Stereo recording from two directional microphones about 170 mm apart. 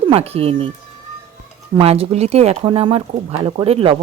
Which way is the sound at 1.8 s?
35° right (ahead or behind).